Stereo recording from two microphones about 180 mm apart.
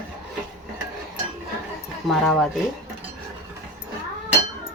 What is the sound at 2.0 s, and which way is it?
Speech, centre (ahead or behind).